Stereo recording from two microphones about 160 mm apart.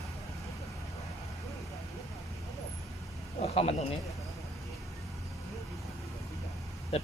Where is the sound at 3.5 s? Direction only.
40° left (ahead or behind).